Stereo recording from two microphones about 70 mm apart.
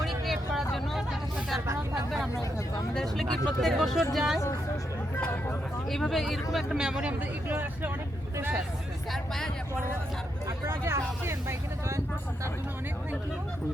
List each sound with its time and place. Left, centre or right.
0.0 s hubbub: centre
1.6 s a sound: right
2.0 s speech: centre
5.9 s speech: centre
7.1 s speech: right
9.1 s speech: centre
10.7 s speech: right